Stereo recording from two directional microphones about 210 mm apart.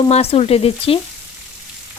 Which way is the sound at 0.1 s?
30° left (ahead or behind).